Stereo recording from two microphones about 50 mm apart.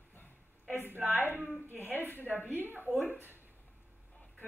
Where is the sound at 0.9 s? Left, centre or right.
Right.